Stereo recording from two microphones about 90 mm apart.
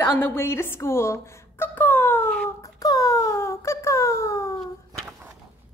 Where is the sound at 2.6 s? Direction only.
40° left (ahead or behind).